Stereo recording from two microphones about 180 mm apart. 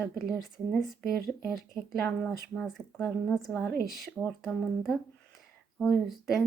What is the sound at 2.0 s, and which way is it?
Speech, 5° left (ahead or behind).